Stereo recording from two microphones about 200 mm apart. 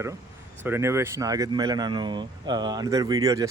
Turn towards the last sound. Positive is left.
turn(degrees=-20)  # may be behind; listen again after turning